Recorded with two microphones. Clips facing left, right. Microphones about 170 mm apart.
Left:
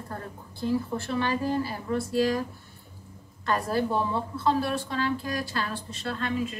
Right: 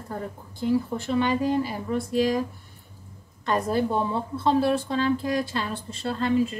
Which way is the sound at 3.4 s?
20° right (ahead or behind).